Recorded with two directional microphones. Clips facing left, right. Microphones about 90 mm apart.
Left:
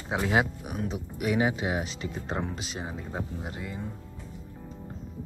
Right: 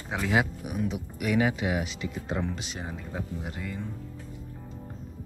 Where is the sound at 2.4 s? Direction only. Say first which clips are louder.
Even; 20° left (ahead or behind).